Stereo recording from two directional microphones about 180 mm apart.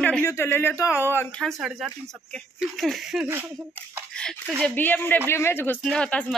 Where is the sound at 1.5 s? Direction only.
Centre (ahead or behind).